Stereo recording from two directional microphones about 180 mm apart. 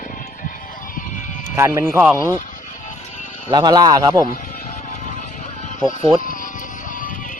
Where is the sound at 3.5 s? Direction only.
25° right (ahead or behind).